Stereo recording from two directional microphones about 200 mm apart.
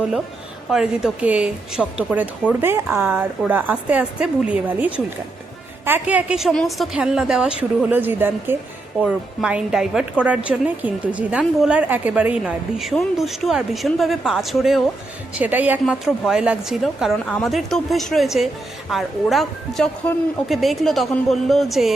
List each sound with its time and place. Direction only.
0.7 s a woman's voice: 5° right (ahead or behind)